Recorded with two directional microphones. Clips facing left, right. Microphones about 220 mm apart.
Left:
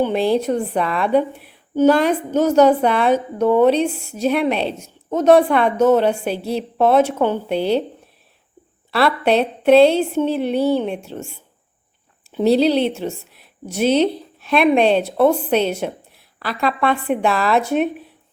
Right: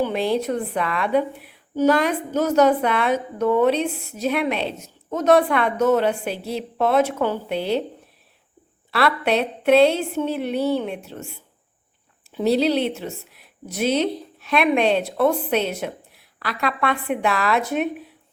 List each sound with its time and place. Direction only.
0.0 s a woman's voice: 30° left (ahead or behind)
9.0 s a woman's voice: 30° left (ahead or behind)
12.4 s a woman's voice: 30° left (ahead or behind)